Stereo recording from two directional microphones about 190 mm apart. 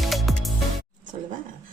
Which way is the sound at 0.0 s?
Centre (ahead or behind).